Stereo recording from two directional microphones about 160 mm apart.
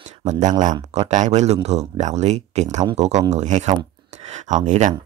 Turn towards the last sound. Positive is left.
turn(degrees=-50)  # may be behind; listen again after turning